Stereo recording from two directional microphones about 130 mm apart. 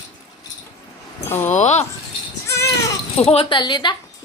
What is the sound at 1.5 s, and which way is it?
Speech, 65° left (ahead or behind).